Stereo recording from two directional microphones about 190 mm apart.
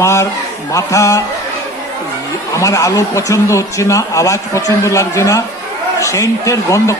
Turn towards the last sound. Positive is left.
turn(degrees=15)  # may be behind; listen again after turning